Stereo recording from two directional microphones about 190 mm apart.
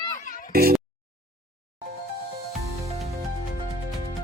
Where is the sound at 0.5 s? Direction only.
55° right (ahead or behind).